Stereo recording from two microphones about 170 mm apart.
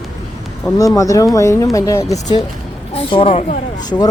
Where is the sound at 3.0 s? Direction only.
30° left (ahead or behind).